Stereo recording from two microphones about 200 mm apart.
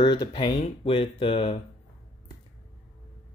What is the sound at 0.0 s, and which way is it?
Speech, 25° left (ahead or behind).